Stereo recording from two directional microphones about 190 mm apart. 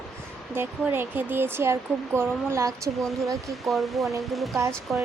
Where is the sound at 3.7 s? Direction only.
Centre (ahead or behind).